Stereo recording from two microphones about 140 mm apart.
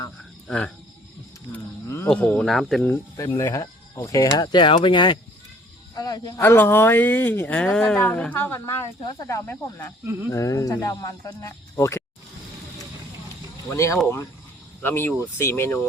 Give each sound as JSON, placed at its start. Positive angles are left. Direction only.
{"t": 0.4, "sound": "speech", "side_deg": 10}
{"t": 1.5, "sound": "cricket", "side_deg": 15}
{"t": 2.0, "sound": "speech", "side_deg": 10}
{"t": 2.8, "sound": "speech", "side_deg": 15}
{"t": 13.7, "sound": "speech", "side_deg": 20}